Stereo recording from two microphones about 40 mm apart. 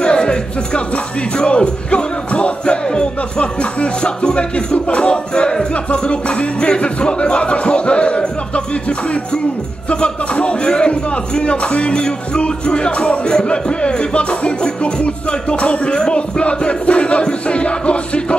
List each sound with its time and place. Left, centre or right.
0.0 s speech: left
1.4 s music: left
9.8 s a man's voice: left
15.5 s music: left